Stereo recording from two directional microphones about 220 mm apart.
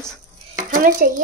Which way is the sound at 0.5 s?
40° right (ahead or behind).